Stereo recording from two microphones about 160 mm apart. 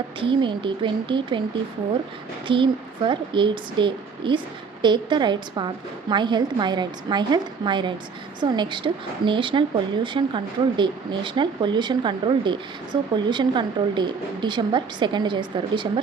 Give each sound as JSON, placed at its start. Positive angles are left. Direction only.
{"t": 0.2, "sound": "a woman's voice", "side_deg": -30}
{"t": 2.5, "sound": "a woman's voice", "side_deg": -30}